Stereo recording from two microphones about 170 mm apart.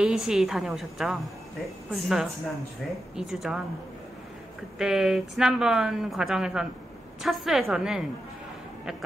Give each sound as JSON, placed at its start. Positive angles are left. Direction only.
{"t": 0.0, "sound": "a woman's voice", "side_deg": -5}
{"t": 4.7, "sound": "a woman's voice", "side_deg": 0}